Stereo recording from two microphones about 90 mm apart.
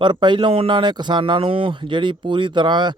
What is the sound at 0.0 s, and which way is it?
Speech, 60° right (ahead or behind).